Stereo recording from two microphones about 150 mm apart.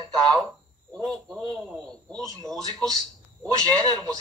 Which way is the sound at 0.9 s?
5° left (ahead or behind).